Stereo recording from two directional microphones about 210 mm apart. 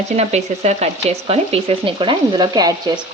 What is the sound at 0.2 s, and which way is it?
Speech, 30° right (ahead or behind).